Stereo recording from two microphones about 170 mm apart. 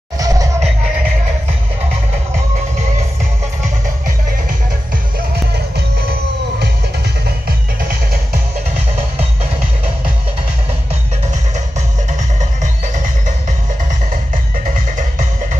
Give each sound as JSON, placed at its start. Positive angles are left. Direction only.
{"t": 0.2, "sound": "music", "side_deg": -20}